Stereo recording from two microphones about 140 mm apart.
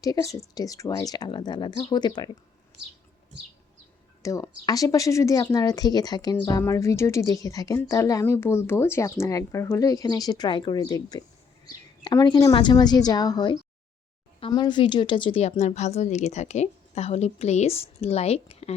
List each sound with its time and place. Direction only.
0.0 s speech: 25° left (ahead or behind)
4.2 s a woman's voice: 25° left (ahead or behind); by 18.7 s 45° left (ahead or behind)